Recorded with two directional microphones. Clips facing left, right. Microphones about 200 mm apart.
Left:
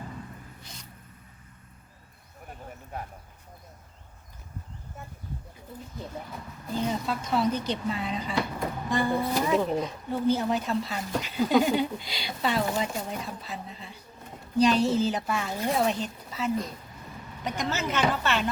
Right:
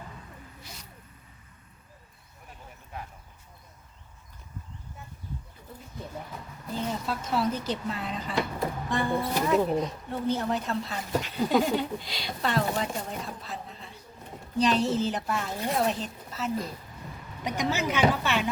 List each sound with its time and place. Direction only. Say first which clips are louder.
2.5 s a sound: left 4 dB; 45° left (ahead or behind)
7.1 s speech: even; 5° right (ahead or behind)
17.4 s a woman's voice: right 2 dB; 15° right (ahead or behind)